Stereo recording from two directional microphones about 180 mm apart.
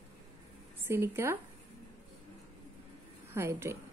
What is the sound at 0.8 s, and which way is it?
Speech, 15° right (ahead or behind).